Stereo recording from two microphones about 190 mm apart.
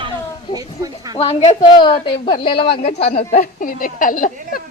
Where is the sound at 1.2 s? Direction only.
30° left (ahead or behind).